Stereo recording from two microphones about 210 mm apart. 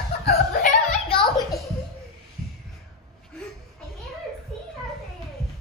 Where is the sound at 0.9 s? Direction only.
25° left (ahead or behind).